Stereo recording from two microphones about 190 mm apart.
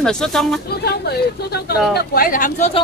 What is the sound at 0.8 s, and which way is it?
Speech, 60° left (ahead or behind).